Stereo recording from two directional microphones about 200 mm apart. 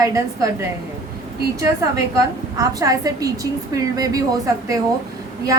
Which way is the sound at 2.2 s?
15° right (ahead or behind).